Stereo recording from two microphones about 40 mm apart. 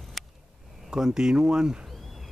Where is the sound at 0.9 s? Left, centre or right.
Centre.